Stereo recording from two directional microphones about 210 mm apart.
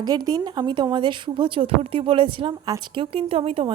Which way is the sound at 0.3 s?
20° right (ahead or behind).